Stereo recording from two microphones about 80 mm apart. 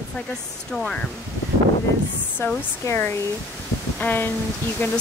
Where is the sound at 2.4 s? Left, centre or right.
Left.